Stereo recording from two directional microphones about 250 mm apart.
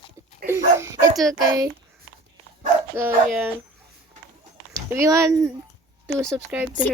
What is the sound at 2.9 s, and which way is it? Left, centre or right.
Speech, centre.